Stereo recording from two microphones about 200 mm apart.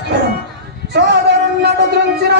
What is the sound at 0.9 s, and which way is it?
Male singing, 55° right (ahead or behind).